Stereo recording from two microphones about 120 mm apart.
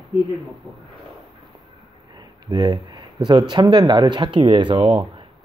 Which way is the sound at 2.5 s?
35° right (ahead or behind).